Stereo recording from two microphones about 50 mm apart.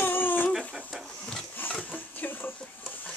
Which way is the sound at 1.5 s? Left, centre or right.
Left.